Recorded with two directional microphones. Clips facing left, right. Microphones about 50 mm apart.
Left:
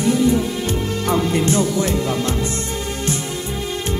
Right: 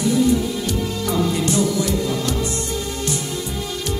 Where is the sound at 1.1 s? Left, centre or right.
Left.